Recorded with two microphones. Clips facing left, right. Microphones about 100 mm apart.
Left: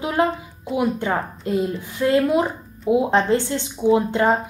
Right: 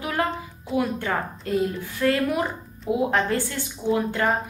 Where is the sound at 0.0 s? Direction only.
20° left (ahead or behind).